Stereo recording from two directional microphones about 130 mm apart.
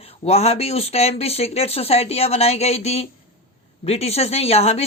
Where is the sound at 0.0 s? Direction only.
50° left (ahead or behind).